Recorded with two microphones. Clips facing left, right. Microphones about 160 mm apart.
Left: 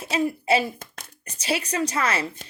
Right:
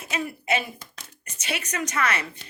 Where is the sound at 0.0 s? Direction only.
30° left (ahead or behind).